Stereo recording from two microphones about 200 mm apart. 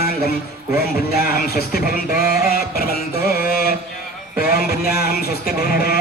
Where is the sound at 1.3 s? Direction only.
50° left (ahead or behind).